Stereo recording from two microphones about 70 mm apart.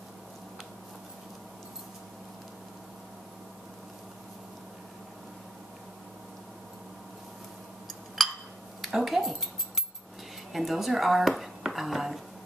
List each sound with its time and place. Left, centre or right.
8.2 s a sound: centre
8.8 s cutlery: centre
10.5 s speech: centre